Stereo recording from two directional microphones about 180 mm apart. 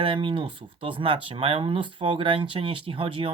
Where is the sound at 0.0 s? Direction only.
30° right (ahead or behind).